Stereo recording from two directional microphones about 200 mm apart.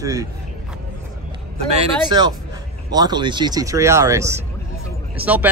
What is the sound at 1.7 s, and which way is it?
Speech, 20° right (ahead or behind).